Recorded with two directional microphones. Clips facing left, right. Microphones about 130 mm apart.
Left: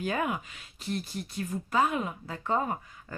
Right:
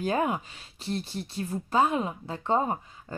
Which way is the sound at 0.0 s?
30° right (ahead or behind).